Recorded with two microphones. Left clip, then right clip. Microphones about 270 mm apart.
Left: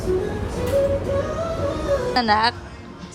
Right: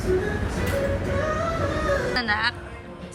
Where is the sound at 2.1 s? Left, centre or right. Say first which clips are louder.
Left 5 dB; left.